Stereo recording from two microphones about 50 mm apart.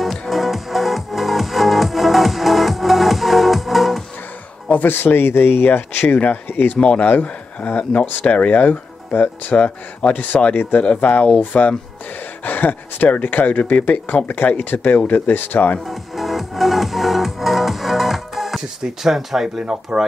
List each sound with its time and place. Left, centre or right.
0.0 s music: centre
4.6 s a man's voice: left
5.7 s speech: left
6.8 s speech: centre
7.1 s speech: left
12.4 s speech: left
15.9 s music: centre
19.0 s speech: centre